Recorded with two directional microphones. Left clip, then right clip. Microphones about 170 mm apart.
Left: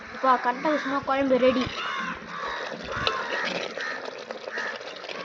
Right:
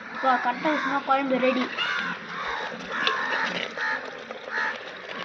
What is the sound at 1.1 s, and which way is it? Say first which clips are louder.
Speech: left 2 dB; 25° left (ahead or behind).